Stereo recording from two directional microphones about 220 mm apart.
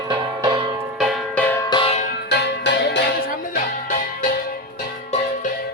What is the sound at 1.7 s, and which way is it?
Music, 25° left (ahead or behind).